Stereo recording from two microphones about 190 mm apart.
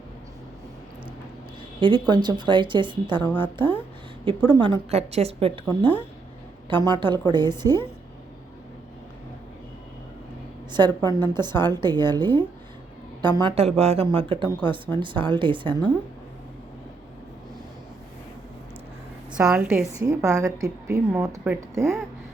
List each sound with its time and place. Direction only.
1.8 s speech: 25° right (ahead or behind)
4.4 s speech: 25° right (ahead or behind)
10.7 s speech: 20° right (ahead or behind)
19.3 s a woman's voice: 5° right (ahead or behind)
21.4 s speech: 5° right (ahead or behind)